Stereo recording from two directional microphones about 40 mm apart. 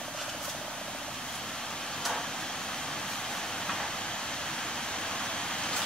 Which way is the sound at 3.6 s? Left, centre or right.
Centre.